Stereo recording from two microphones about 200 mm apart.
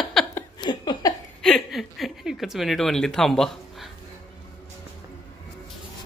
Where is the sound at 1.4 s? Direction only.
Centre (ahead or behind).